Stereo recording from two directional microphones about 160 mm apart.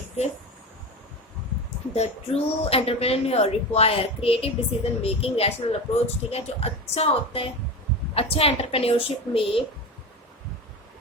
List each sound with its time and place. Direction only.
1.9 s speech: 40° left (ahead or behind)